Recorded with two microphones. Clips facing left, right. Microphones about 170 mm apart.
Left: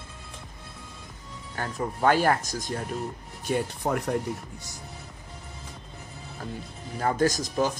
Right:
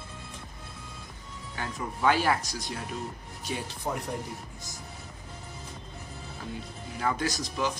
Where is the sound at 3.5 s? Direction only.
60° left (ahead or behind).